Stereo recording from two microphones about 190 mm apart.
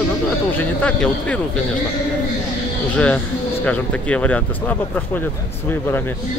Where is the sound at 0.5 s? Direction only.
5° left (ahead or behind).